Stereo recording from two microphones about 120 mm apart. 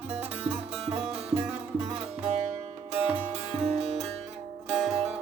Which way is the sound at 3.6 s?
60° right (ahead or behind).